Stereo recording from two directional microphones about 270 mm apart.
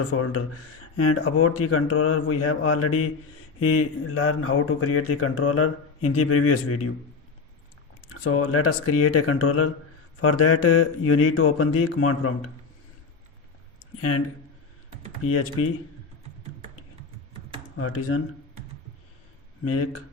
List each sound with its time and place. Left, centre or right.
0.1 s speech: left
8.1 s speech: left
15.2 s speech: left
17.7 s speech: left
19.6 s speech: left